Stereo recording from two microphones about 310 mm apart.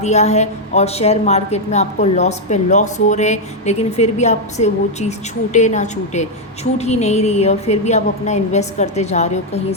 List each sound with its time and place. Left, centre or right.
0.0 s a woman's voice: left